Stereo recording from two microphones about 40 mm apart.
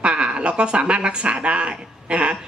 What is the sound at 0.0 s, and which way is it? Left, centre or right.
A woman's voice, right.